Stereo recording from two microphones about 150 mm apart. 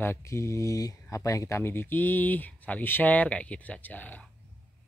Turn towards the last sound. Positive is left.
turn(degrees=10)  # may be behind; listen again after turning